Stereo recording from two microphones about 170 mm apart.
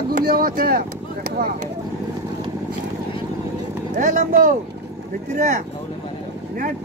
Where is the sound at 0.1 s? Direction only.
65° right (ahead or behind).